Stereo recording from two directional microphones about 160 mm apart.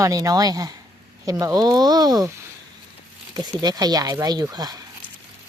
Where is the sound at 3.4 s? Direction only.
25° right (ahead or behind).